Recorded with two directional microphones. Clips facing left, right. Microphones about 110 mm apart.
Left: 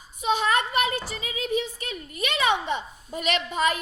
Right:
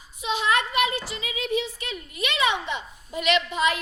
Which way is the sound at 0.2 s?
45° left (ahead or behind).